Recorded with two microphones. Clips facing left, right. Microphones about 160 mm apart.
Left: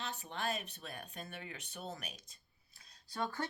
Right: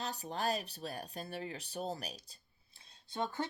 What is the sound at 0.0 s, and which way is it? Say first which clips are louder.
Speech: right 4 dB; 35° right (ahead or behind).